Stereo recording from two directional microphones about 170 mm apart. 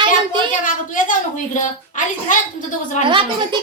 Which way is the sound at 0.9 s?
50° left (ahead or behind).